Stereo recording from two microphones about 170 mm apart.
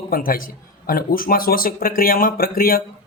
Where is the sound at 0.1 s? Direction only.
55° left (ahead or behind).